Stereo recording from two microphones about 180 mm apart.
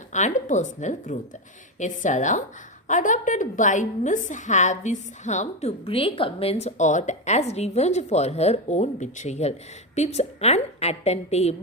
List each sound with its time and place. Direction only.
0.1 s a woman's voice: 45° left (ahead or behind)